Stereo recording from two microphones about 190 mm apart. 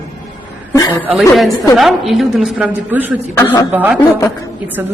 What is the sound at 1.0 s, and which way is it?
A man's voice, 5° right (ahead or behind).